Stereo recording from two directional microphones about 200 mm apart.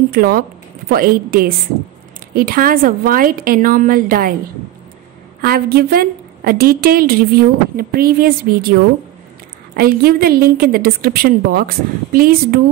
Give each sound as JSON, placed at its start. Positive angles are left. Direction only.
{"t": 0.1, "sound": "a woman's voice", "side_deg": -45}
{"t": 5.4, "sound": "a woman's voice", "side_deg": -50}
{"t": 9.8, "sound": "a woman's voice", "side_deg": -50}